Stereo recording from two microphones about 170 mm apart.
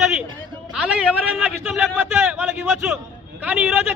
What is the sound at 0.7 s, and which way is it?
A man's voice, 5° right (ahead or behind).